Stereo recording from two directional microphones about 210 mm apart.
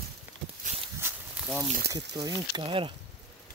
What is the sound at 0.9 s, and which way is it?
Walk, 10° right (ahead or behind).